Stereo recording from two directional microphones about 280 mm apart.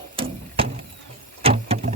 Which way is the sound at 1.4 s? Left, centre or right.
Right.